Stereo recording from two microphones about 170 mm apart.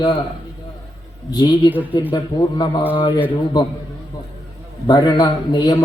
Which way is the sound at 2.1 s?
25° left (ahead or behind).